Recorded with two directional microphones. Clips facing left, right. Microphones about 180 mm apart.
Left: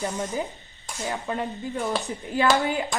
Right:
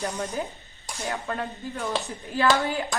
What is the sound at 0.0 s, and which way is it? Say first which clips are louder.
Speech: left 1 dB; centre (ahead or behind).